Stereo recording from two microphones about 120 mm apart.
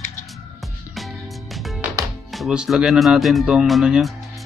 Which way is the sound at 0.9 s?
Centre (ahead or behind).